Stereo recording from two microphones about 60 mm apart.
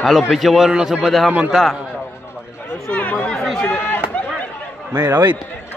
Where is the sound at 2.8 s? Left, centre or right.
Left.